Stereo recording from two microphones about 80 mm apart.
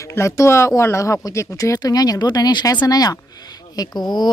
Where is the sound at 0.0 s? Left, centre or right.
Left.